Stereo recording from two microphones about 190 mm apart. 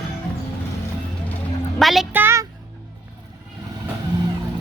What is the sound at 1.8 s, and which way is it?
Speech, centre (ahead or behind).